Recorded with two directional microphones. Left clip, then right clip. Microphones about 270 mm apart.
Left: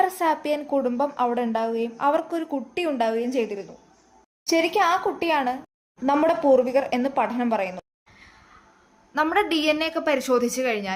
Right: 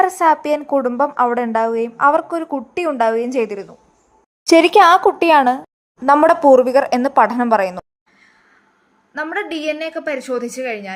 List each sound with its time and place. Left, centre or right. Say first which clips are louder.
0.0 s a woman's voice: right 8 dB; centre
4.4 s a woman's voice: right 11 dB; right
9.1 s a woman's voice: left 1 dB; centre